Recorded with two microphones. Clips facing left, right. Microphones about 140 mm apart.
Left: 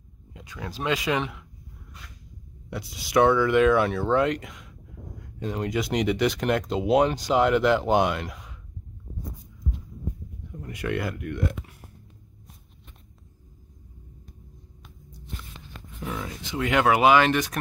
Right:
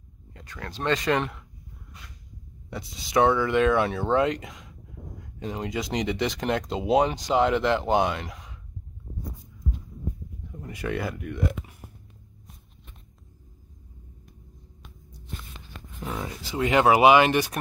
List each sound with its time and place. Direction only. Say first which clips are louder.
0.3 s speech: left 2 dB; 10° left (ahead or behind)
2.7 s speech: left 2 dB; centre (ahead or behind)
5.4 s speech: left 2 dB; 10° right (ahead or behind)
5.7 s speech: left 4 dB; centre (ahead or behind)
10.6 s speech: left 1 dB; 5° right (ahead or behind)
16.0 s speech: even; 15° right (ahead or behind)
16.4 s speech: right 2 dB; 30° right (ahead or behind)
16.9 s speech: right 2 dB; 10° right (ahead or behind)